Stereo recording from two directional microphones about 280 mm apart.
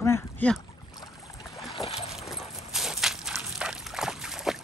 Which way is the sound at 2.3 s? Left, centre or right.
Centre.